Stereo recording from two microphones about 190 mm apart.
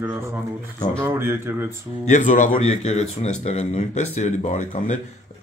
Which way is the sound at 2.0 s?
40° left (ahead or behind).